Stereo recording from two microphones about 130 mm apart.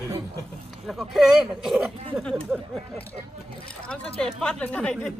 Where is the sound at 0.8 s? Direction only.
Centre (ahead or behind).